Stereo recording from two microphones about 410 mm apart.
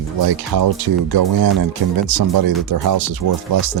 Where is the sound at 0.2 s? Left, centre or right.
Right.